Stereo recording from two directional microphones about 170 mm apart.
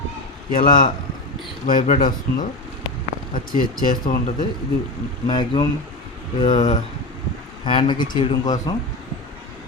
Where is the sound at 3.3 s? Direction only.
55° left (ahead or behind).